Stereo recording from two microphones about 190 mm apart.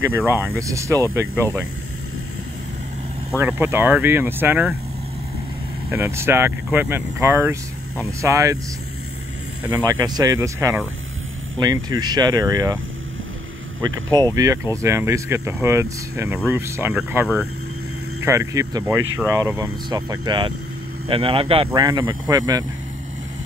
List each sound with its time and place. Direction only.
0.0 s speech: 10° right (ahead or behind)
3.3 s speech: 10° right (ahead or behind)
5.9 s speech: 15° right (ahead or behind)
9.8 s speech: 20° right (ahead or behind)
14.1 s speech: 20° right (ahead or behind)